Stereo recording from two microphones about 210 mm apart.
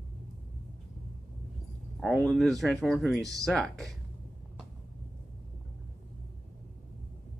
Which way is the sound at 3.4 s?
Centre (ahead or behind).